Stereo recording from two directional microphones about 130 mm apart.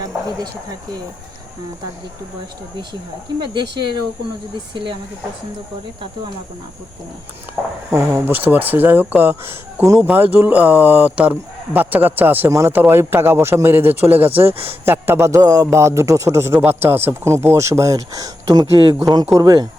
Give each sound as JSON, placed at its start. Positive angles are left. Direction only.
{"t": 3.4, "sound": "speech", "side_deg": -35}
{"t": 7.9, "sound": "a man's voice", "side_deg": -20}